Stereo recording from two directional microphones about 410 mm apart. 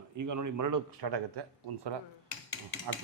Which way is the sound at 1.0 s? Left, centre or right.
Right.